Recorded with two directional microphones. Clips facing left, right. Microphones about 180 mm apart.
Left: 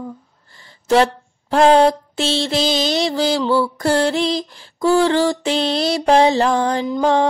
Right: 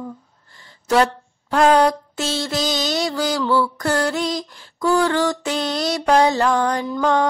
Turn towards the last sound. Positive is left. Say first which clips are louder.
# left 3 dB
turn(degrees=30)  # may be behind; listen again after turning